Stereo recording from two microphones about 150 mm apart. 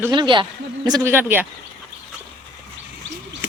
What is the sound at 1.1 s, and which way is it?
Speech, 15° right (ahead or behind).